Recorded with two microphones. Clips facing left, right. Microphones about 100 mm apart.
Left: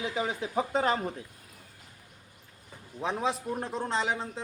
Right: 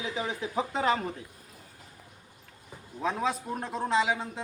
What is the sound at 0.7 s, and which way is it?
Speech, 35° left (ahead or behind).